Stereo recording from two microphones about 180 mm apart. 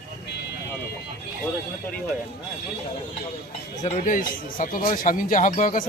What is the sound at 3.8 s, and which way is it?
Speech, 45° left (ahead or behind).